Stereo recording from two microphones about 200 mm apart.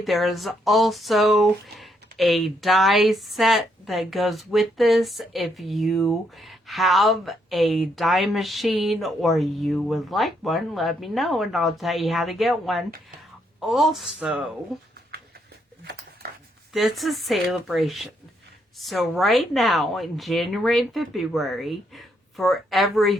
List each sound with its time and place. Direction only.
0.0 s speech: centre (ahead or behind)
15.8 s a sound: 55° right (ahead or behind)
16.7 s speech: centre (ahead or behind)